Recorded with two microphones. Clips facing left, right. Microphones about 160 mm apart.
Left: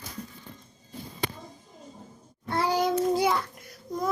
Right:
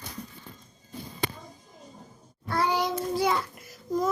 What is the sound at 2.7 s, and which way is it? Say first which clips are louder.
Speech: left 5 dB; 45° left (ahead or behind).